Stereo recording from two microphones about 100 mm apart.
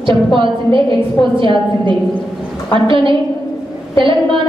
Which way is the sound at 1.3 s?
55° right (ahead or behind).